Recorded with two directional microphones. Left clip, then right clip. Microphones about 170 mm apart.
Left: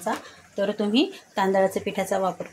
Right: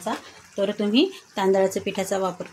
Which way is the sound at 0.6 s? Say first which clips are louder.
Right 2 dB; 15° right (ahead or behind).